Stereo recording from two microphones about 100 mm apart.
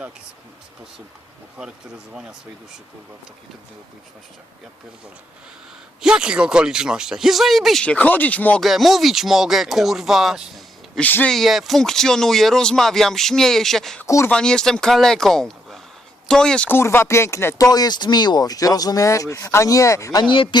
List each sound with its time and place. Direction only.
6.0 s speech: 5° right (ahead or behind)
7.9 s speech: 15° left (ahead or behind)
8.6 s speech: centre (ahead or behind)
11.0 s speech: 15° left (ahead or behind)
11.3 s speech: centre (ahead or behind)
16.6 s speech: 25° left (ahead or behind)
17.7 s speech: 40° left (ahead or behind)
20.3 s speech: 60° left (ahead or behind)